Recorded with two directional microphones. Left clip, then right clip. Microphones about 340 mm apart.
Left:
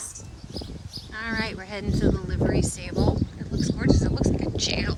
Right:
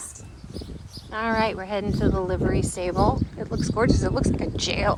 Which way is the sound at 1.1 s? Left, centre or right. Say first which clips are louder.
Right 6 dB; centre.